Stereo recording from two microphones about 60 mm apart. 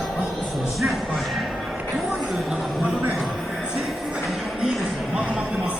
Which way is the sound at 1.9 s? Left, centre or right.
Centre.